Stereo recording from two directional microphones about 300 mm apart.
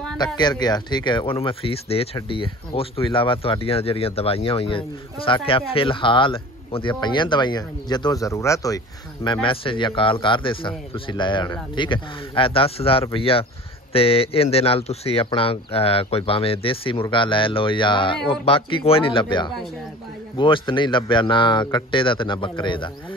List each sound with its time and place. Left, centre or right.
0.4 s speech: centre